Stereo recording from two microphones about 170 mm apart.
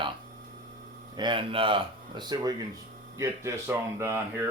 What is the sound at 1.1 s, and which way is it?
Speech, 25° right (ahead or behind).